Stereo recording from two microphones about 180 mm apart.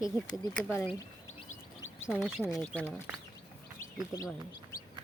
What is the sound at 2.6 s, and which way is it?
Speech, 10° left (ahead or behind).